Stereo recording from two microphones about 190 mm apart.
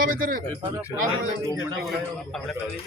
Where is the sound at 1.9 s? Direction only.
Centre (ahead or behind).